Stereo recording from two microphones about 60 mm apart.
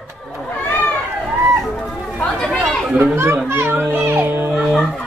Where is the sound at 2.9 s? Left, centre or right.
Right.